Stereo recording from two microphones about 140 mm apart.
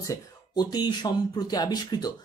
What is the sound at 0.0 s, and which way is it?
Speech, 25° left (ahead or behind).